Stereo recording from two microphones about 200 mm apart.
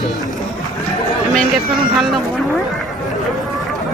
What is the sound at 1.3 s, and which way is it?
Speech, centre (ahead or behind).